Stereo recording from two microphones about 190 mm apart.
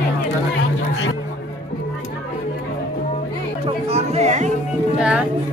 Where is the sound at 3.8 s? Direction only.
35° right (ahead or behind).